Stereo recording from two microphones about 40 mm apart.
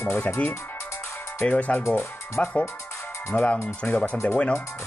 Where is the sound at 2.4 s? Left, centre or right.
Left.